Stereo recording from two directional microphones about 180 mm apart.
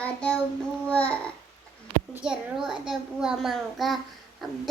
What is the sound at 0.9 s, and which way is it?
Babbling, 5° left (ahead or behind).